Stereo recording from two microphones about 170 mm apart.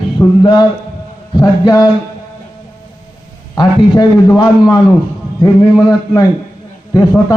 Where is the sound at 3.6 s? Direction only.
25° left (ahead or behind).